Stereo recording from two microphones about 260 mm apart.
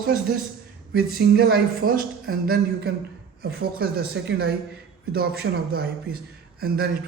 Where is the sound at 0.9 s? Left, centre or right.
Right.